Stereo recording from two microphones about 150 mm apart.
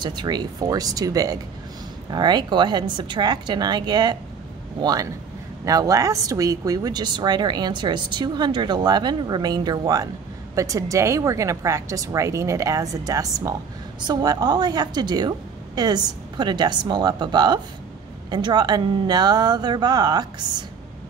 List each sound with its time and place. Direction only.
0.0 s speech: 30° right (ahead or behind)